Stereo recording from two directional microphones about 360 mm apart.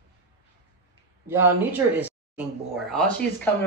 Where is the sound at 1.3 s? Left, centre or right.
Centre.